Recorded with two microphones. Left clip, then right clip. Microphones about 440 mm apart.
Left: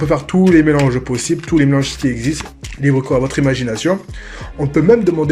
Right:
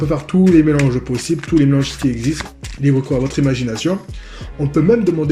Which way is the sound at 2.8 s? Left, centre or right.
Left.